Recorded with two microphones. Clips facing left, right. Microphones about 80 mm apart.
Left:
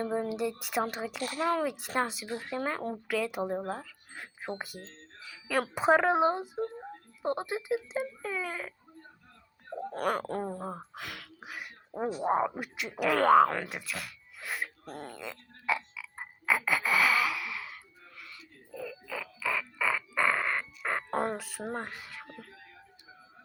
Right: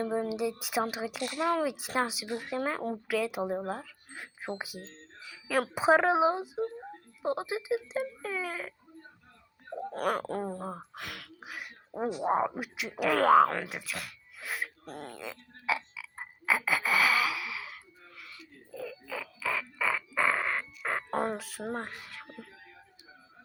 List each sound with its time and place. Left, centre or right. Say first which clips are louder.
0.0 s speech: right 1 dB; centre
1.2 s speech: even; left
1.5 s speech: right 1 dB; centre
9.9 s speech: even; centre
18.2 s a sound: even; centre